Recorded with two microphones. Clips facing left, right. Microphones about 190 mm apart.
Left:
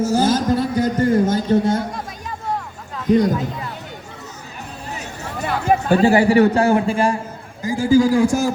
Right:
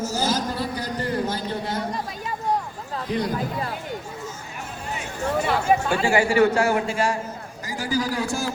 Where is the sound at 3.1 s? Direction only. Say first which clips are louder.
Left 11 dB; 45° left (ahead or behind).